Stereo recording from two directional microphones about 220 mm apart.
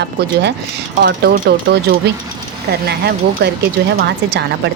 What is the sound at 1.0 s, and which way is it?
A woman's voice, 45° right (ahead or behind).